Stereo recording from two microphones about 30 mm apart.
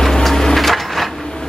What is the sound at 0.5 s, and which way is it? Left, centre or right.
Crushing, centre.